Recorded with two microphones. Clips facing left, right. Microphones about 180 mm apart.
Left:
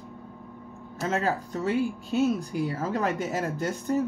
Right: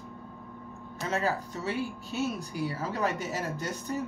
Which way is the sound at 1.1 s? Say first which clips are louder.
Left 3 dB; 50° left (ahead or behind).